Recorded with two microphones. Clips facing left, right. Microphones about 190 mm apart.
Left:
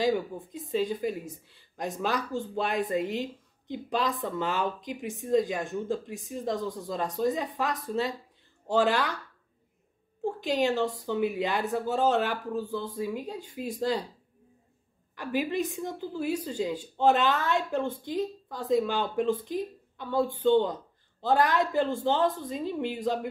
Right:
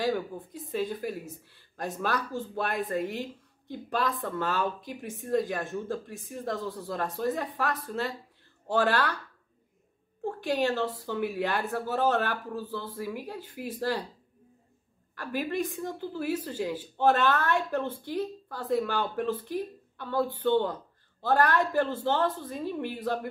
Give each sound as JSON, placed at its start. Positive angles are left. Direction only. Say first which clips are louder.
{"t": 0.0, "sound": "speech", "louder": "left 2 dB", "side_deg": 15}
{"t": 10.2, "sound": "speech", "louder": "left 1 dB", "side_deg": 15}
{"t": 15.1, "sound": "speech", "louder": "left 2 dB", "side_deg": 15}